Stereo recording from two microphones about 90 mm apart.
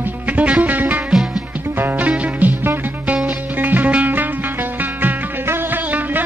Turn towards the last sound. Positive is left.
turn(degrees=-20)  # may be behind; listen again after turning